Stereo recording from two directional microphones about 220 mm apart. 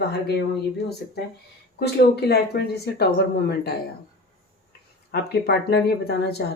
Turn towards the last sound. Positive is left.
turn(degrees=45)  # may be behind; listen again after turning